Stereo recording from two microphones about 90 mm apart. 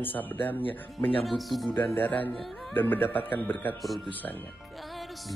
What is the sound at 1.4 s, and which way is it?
Speech, centre (ahead or behind).